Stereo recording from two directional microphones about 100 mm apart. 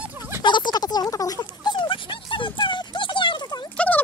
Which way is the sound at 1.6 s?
50° left (ahead or behind).